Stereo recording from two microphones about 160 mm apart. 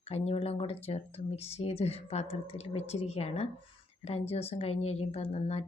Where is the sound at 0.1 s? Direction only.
40° left (ahead or behind).